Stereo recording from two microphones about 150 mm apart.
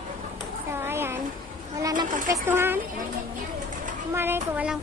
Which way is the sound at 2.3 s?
15° right (ahead or behind).